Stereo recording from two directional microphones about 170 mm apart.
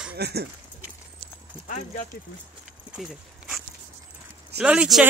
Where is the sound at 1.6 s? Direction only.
50° left (ahead or behind).